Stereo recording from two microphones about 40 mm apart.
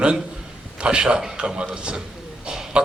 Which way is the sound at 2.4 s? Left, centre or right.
Centre.